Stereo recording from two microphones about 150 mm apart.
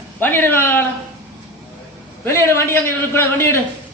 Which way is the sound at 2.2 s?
15° left (ahead or behind).